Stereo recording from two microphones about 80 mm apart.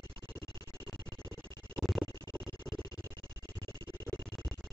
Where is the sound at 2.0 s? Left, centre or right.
Left.